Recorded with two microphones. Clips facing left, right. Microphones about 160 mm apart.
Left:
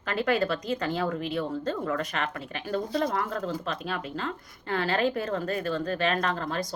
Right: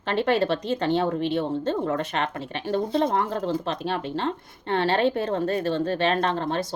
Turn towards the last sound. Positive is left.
turn(degrees=-25)  # may be behind; listen again after turning